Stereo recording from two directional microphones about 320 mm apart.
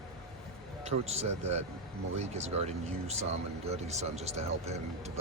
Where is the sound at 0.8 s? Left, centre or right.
Centre.